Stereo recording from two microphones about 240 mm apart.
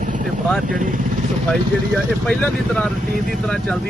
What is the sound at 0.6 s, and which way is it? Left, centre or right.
Speech, right.